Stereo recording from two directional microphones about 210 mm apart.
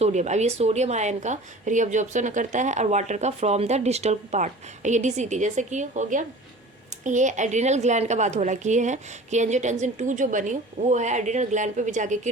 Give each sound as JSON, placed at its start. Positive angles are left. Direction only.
{"t": 0.0, "sound": "speech", "side_deg": -35}